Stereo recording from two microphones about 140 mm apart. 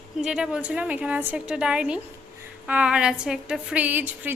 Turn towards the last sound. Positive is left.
turn(degrees=-10)  # may be behind; listen again after turning